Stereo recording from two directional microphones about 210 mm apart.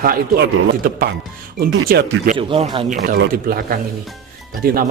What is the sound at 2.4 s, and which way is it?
Speech, 25° right (ahead or behind).